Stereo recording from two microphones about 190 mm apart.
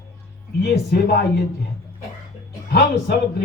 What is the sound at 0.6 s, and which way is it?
Speech, 60° left (ahead or behind).